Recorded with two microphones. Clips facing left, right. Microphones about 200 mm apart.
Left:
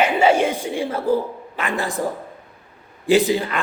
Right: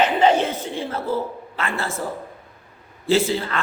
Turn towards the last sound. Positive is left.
turn(degrees=15)  # may be behind; listen again after turning